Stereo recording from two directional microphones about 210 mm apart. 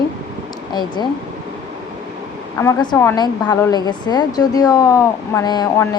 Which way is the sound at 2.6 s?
15° left (ahead or behind).